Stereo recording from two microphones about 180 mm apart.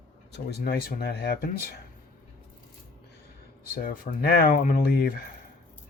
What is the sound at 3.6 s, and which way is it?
Speech, 55° left (ahead or behind).